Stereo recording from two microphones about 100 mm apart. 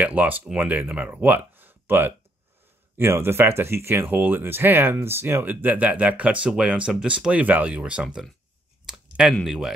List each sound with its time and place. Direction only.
0.0 s speech: 15° right (ahead or behind)
8.8 s a sound: 5° right (ahead or behind)
9.3 s speech: centre (ahead or behind)